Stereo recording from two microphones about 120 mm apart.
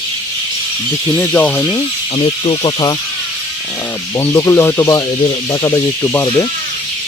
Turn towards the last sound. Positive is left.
turn(degrees=20)  # may be behind; listen again after turning